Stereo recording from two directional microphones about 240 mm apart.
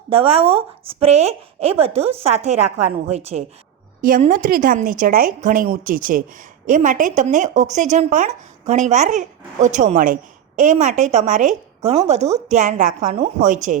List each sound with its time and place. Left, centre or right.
0.1 s a woman's voice: right
2.5 s a woman's voice: right
2.7 s a woman's voice: right